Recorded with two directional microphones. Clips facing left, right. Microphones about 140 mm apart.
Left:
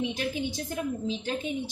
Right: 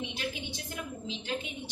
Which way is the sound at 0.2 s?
40° left (ahead or behind).